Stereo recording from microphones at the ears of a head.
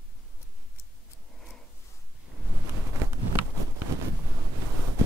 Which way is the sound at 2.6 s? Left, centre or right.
Right.